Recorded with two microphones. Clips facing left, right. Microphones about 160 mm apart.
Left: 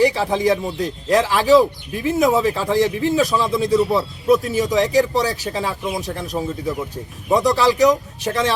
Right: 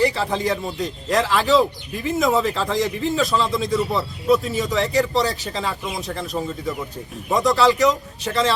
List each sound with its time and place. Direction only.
0.0 s speech: 15° left (ahead or behind)